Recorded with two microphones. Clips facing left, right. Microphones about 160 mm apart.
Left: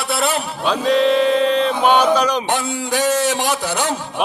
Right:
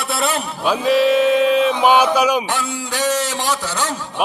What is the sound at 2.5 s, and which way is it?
A man's voice, 15° left (ahead or behind).